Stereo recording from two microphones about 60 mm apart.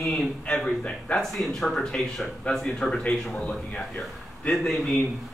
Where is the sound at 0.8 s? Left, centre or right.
Left.